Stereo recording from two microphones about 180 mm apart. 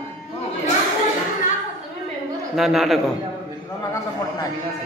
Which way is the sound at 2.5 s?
Centre (ahead or behind).